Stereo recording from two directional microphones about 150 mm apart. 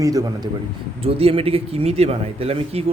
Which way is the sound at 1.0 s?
40° right (ahead or behind).